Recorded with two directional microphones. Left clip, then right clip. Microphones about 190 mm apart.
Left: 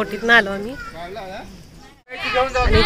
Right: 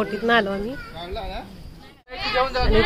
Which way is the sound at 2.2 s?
30° left (ahead or behind).